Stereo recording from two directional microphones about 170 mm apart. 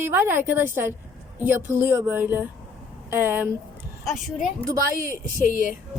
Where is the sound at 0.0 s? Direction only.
15° right (ahead or behind).